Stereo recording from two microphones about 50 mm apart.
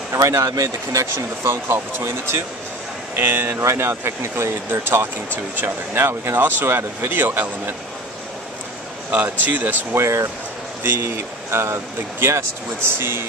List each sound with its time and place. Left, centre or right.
0.1 s speech: right
2.0 s speech: right
3.6 s speech: right
7.1 s speech: right
9.1 s speech: right
9.9 s speech: right
10.8 s speech: right
11.5 s speech: right